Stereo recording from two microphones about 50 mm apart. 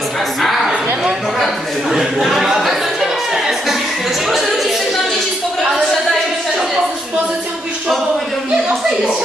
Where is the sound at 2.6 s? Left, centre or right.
Centre.